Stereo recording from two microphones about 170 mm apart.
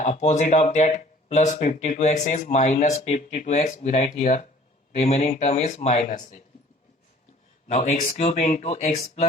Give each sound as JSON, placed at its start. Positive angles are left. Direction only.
{"t": 0.0, "sound": "speech", "side_deg": 40}
{"t": 7.7, "sound": "speech", "side_deg": 40}